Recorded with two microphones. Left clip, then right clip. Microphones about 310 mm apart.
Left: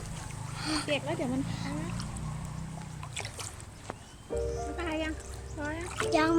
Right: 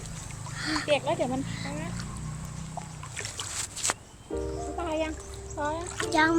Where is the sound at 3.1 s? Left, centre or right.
Centre.